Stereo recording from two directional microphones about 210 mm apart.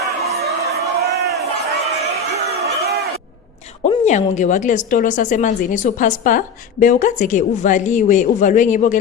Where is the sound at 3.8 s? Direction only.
30° left (ahead or behind).